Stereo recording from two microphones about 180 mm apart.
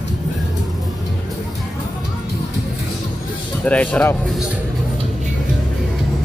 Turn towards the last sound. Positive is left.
turn(degrees=10)  # may be behind; listen again after turning